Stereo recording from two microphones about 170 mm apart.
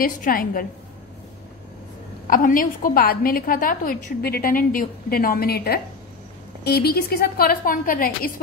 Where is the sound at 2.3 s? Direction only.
55° left (ahead or behind).